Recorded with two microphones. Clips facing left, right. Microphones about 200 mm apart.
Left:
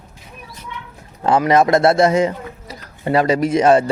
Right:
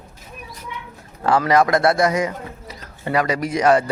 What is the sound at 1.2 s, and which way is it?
Speech, 20° left (ahead or behind).